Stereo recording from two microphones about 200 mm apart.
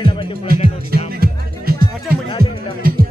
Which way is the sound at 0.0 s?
25° left (ahead or behind).